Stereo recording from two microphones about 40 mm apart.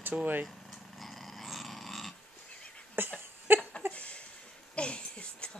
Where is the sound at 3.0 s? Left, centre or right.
Right.